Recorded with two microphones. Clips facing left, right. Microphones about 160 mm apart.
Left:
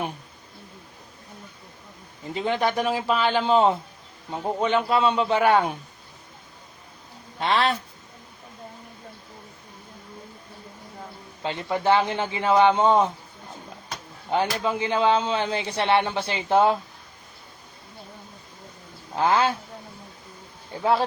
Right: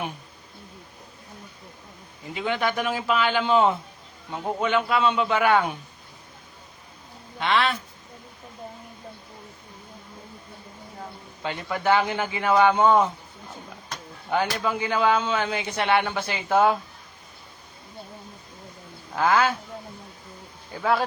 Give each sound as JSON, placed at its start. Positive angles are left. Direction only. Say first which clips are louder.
{"t": 2.3, "sound": "a man's voice", "louder": "left 2 dB", "side_deg": 35}
{"t": 7.3, "sound": "a man's voice", "louder": "left 1 dB", "side_deg": 35}
{"t": 11.4, "sound": "speech", "louder": "left 1 dB", "side_deg": 25}
{"t": 14.3, "sound": "speech", "louder": "left 1 dB", "side_deg": 25}
{"t": 19.1, "sound": "speech", "louder": "even", "side_deg": 25}
{"t": 20.7, "sound": "speech", "louder": "left 2 dB", "side_deg": 25}